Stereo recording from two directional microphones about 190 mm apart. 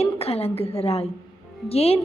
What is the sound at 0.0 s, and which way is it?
A woman's voice, 30° left (ahead or behind).